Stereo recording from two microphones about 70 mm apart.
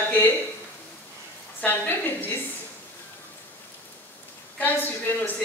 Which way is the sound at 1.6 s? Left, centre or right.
Left.